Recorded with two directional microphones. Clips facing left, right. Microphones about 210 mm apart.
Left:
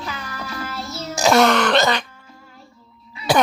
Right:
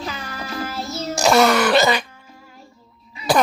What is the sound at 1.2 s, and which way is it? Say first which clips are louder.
Throat clearing: even; centre (ahead or behind).